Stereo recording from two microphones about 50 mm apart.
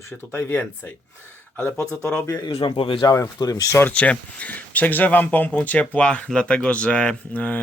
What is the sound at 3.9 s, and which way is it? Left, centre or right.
Speech, left.